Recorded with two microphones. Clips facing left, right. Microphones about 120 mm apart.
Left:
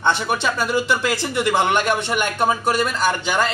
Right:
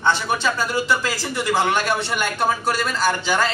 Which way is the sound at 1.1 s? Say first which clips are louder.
Left 2 dB; 20° left (ahead or behind).